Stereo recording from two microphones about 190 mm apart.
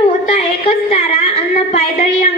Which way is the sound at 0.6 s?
30° left (ahead or behind).